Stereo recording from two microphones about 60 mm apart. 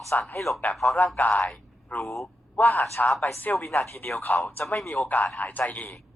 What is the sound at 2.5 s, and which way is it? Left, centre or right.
A man's voice, left.